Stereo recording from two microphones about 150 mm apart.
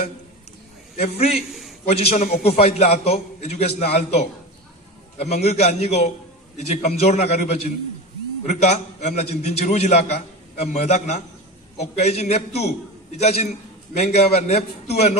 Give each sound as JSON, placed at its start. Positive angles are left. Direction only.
{"t": 0.9, "sound": "a man's voice", "side_deg": 45}